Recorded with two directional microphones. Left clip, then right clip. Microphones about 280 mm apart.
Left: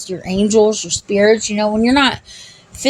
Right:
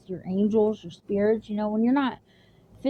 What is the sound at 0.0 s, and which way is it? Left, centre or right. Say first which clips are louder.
Speech: left 10 dB; right.